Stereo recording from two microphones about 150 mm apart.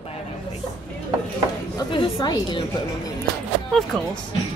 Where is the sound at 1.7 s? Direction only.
30° left (ahead or behind).